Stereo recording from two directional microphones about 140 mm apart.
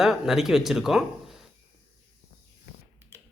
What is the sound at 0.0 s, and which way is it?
Speech, centre (ahead or behind).